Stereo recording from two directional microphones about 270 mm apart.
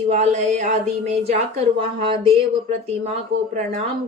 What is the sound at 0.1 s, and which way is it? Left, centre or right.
Speech, right.